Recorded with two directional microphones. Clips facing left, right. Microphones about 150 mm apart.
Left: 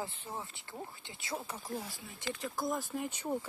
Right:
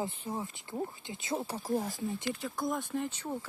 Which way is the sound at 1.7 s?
45° right (ahead or behind).